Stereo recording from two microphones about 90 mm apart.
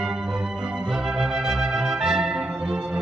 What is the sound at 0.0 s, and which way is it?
Music, 5° right (ahead or behind).